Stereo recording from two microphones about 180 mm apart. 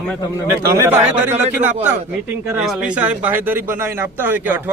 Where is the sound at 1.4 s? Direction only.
40° right (ahead or behind).